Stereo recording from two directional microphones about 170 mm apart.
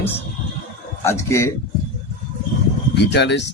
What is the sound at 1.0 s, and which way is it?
Speech, 15° left (ahead or behind).